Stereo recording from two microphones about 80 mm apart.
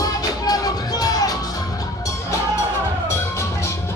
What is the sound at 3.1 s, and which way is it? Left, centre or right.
Music, left.